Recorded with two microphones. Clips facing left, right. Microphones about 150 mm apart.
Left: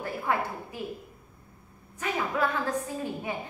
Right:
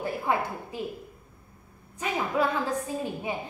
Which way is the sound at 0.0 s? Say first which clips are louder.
Right 2 dB; 15° right (ahead or behind).